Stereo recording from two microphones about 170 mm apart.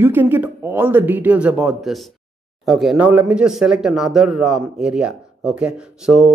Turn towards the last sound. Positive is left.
turn(degrees=-5)  # may be behind; listen again after turning